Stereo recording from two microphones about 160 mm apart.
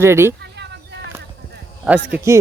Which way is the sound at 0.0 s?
15° right (ahead or behind).